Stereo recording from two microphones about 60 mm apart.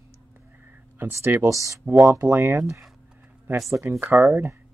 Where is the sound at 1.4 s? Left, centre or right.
Right.